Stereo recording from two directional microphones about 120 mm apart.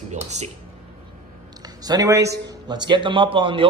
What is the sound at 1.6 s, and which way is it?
A man's voice, 35° right (ahead or behind).